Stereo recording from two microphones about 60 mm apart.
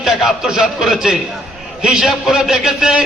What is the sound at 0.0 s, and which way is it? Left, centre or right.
A man's voice, centre.